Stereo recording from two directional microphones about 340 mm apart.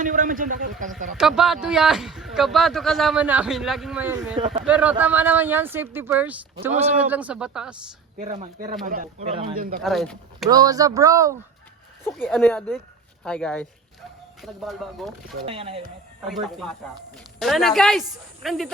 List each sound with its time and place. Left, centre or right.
0.0 s speech: right
1.1 s a man's voice: centre
8.2 s speech: right
9.8 s a man's voice: centre
10.5 s speech: centre
12.0 s a man's voice: centre
15.2 s speech: centre
16.2 s a man's voice: centre